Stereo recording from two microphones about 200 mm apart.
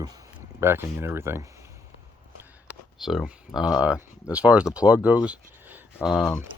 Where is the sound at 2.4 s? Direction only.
5° right (ahead or behind).